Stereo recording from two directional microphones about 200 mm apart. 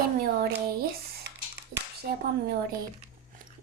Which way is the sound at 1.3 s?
55° right (ahead or behind).